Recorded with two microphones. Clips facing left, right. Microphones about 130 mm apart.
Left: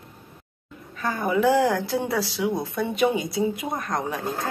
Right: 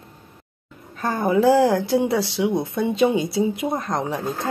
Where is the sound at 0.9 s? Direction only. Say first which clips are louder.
Right 4 dB; 40° right (ahead or behind); by 4.2 s 25° right (ahead or behind).